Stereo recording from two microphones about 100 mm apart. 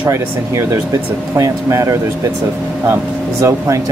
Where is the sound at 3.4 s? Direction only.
30° right (ahead or behind).